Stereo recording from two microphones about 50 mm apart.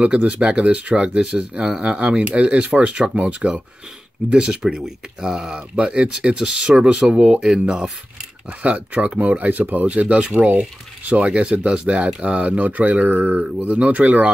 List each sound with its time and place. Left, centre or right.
0.0 s speech: right
4.7 s speech: centre
5.8 s speech: right
8.6 s speech: right